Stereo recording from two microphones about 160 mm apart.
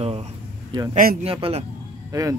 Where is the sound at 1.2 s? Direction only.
35° right (ahead or behind).